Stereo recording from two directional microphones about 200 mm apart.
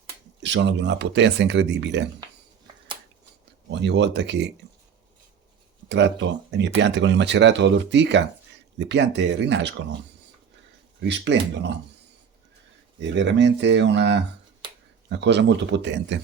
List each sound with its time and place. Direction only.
0.4 s speech: 60° right (ahead or behind)
3.7 s speech: 60° right (ahead or behind)
5.9 s speech: 65° right (ahead or behind)
11.0 s speech: 60° right (ahead or behind)
13.0 s speech: 65° right (ahead or behind)
14.6 s a sound: 25° right (ahead or behind)
15.1 s speech: 60° right (ahead or behind)